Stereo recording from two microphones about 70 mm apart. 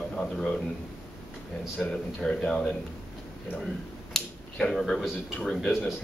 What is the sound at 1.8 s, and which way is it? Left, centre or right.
Speech, centre.